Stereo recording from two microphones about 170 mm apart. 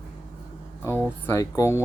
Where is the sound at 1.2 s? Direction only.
15° left (ahead or behind).